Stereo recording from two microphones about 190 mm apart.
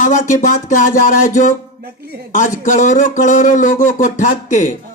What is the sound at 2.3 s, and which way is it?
Speech, 40° left (ahead or behind).